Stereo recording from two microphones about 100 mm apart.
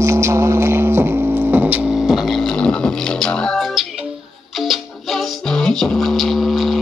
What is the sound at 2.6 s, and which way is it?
Beatboxing, 10° left (ahead or behind).